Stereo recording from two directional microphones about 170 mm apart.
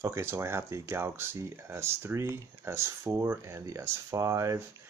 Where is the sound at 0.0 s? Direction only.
15° right (ahead or behind).